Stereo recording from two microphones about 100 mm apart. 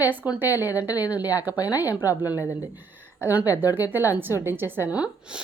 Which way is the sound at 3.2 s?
20° right (ahead or behind).